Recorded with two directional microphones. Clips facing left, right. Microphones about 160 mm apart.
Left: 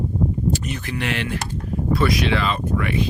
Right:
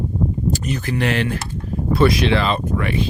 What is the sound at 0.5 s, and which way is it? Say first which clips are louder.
Speech: right 4 dB; 40° right (ahead or behind).